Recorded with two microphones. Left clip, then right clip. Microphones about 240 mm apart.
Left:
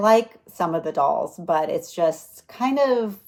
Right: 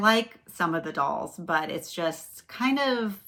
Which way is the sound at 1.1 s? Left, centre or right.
Centre.